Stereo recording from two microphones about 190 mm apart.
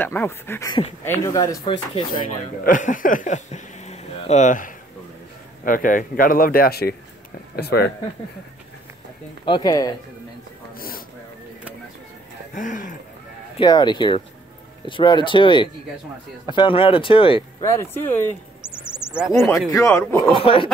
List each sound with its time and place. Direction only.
0.0 s speech: 10° left (ahead or behind)
2.1 s speech: 45° left (ahead or behind)
9.4 s speech: 25° left (ahead or behind)
12.5 s speech: 45° left (ahead or behind)
13.6 s speech: 20° left (ahead or behind)
17.6 s speech: 15° left (ahead or behind)
18.9 s a sound: 15° left (ahead or behind)
19.7 s speech: 15° left (ahead or behind)
20.2 s speech: 30° left (ahead or behind)